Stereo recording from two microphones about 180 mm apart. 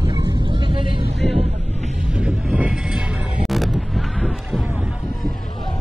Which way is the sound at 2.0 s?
5° right (ahead or behind).